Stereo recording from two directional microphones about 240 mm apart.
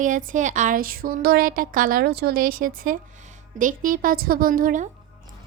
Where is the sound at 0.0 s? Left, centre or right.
Right.